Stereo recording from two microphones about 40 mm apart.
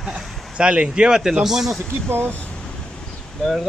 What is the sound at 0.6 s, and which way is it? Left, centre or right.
Speech, right.